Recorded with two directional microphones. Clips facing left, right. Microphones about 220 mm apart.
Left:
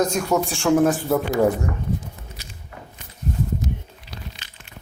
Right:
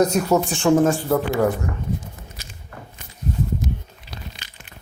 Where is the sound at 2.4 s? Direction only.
45° right (ahead or behind).